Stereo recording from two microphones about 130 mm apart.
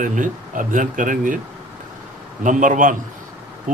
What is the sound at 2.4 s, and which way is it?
Speech, 85° right.